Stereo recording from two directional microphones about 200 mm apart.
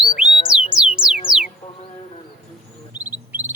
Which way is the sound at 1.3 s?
5° right (ahead or behind).